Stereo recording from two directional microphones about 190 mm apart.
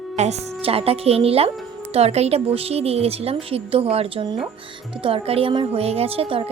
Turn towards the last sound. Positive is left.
turn(degrees=-30)  # may be behind; listen again after turning